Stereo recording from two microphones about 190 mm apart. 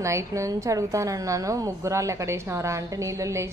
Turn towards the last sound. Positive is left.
turn(degrees=-15)  # may be behind; listen again after turning